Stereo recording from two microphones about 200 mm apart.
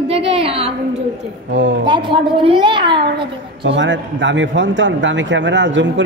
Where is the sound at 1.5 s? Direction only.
65° right (ahead or behind).